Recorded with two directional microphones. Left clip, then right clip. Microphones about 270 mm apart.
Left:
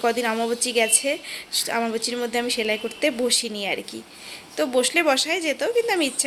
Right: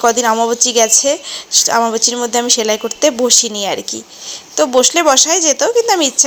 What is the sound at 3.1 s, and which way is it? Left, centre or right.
Speech, centre.